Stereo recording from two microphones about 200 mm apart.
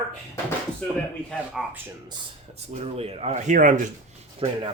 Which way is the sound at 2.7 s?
30° right (ahead or behind).